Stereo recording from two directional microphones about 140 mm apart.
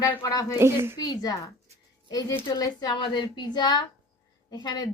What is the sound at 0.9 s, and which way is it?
Speech, 30° left (ahead or behind).